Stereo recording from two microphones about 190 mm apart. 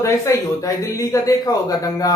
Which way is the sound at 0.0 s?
15° left (ahead or behind).